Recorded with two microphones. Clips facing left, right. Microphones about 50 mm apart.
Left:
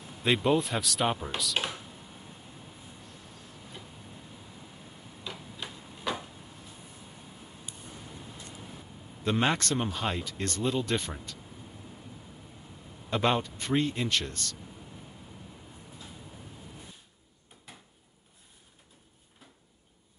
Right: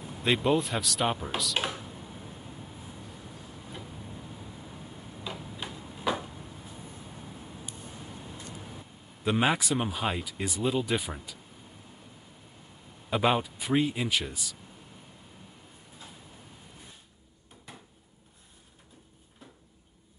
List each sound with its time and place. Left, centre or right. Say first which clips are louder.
0.2 s speech: even; centre
5.2 s tick-tock: right 2 dB; centre
9.2 s speech: right 1 dB; centre
13.1 s speech: right 1 dB; centre